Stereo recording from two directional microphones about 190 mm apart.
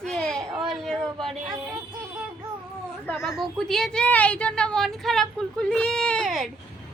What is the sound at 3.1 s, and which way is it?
A woman's voice, centre (ahead or behind).